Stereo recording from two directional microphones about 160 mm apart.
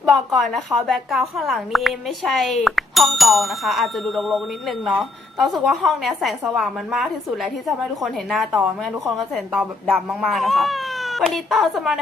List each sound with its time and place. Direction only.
0.0 s a woman's voice: centre (ahead or behind)